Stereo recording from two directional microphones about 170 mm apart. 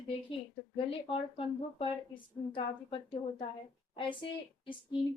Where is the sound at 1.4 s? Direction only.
30° left (ahead or behind).